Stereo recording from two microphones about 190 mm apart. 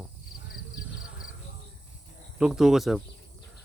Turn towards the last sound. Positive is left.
turn(degrees=0)  # may be behind; listen again after turning